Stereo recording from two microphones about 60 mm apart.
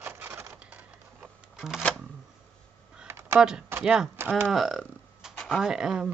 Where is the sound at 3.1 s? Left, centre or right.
Right.